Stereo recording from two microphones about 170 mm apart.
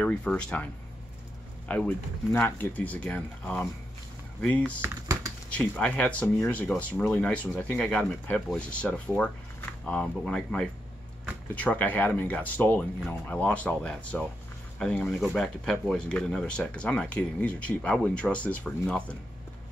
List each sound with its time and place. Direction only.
0.0 s speech: 5° left (ahead or behind)
1.7 s speech: 5° left (ahead or behind)
4.8 s typing: 20° right (ahead or behind)
5.5 s speech: 5° left (ahead or behind)